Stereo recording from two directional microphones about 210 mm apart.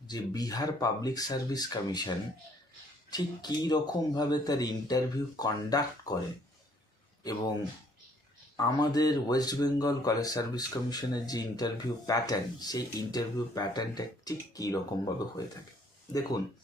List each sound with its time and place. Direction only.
0.1 s speech: 20° left (ahead or behind)
8.5 s speech: 15° left (ahead or behind)